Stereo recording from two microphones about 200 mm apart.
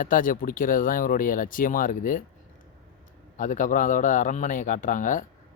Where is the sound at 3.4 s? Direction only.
40° left (ahead or behind).